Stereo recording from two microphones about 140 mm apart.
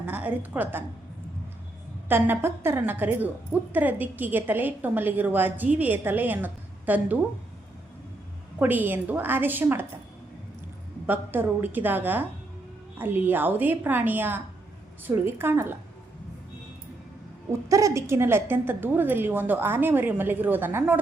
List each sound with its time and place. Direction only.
0.0 s a woman's voice: 10° right (ahead or behind)
2.0 s a woman's voice: 15° right (ahead or behind)
8.5 s a woman's voice: 15° right (ahead or behind)
11.0 s a woman's voice: 15° right (ahead or behind)
17.5 s a woman's voice: 25° right (ahead or behind)